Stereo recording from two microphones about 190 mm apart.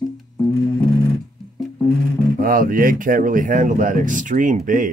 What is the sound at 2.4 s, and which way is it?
Speech, 50° right (ahead or behind).